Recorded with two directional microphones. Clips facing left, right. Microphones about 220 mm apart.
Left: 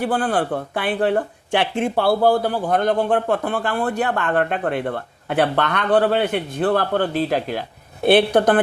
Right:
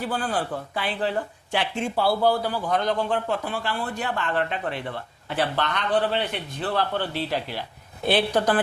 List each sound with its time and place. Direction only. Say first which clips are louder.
0.0 s speech: left 7 dB; 55° left (ahead or behind)